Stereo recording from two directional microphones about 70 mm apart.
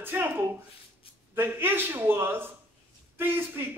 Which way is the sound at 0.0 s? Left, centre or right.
Right.